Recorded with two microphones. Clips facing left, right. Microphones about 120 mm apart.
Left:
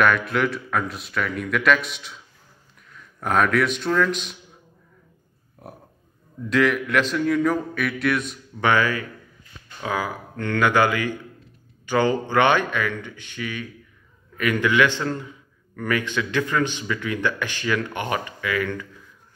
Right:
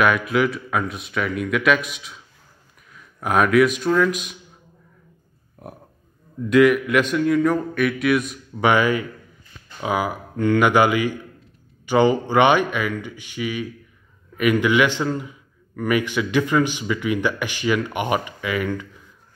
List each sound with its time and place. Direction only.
0.0 s a man's voice: 5° right (ahead or behind)
6.5 s speech: 5° right (ahead or behind)
8.6 s a man's voice: 15° right (ahead or behind)